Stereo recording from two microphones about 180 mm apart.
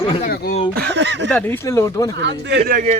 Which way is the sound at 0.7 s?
70° right (ahead or behind).